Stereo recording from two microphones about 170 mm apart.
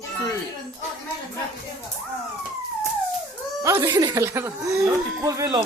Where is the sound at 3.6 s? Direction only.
15° right (ahead or behind).